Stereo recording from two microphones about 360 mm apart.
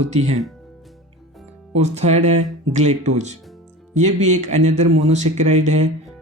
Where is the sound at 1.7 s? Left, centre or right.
Centre.